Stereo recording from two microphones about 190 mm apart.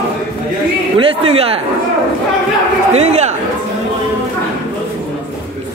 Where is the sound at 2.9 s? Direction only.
35° right (ahead or behind).